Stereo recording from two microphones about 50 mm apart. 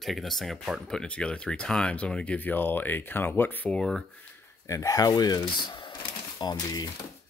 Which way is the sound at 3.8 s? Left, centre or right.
Centre.